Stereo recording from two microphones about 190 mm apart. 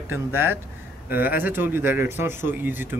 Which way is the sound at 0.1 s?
10° right (ahead or behind).